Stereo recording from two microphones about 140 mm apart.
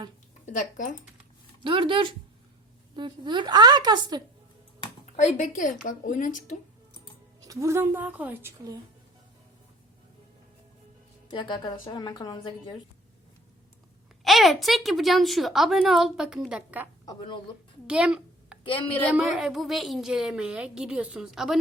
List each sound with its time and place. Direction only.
0.5 s a woman's voice: 70° left (ahead or behind)
1.6 s a woman's voice: 35° right (ahead or behind)
5.1 s a woman's voice: 60° left (ahead or behind)
7.4 s a woman's voice: 20° right (ahead or behind)
11.3 s a woman's voice: 35° left (ahead or behind)
14.3 s a woman's voice: centre (ahead or behind)
17.1 s a woman's voice: 35° left (ahead or behind)
17.8 s a woman's voice: 5° right (ahead or behind)
18.6 s a woman's voice: 40° left (ahead or behind)
19.1 s a woman's voice: 5° right (ahead or behind)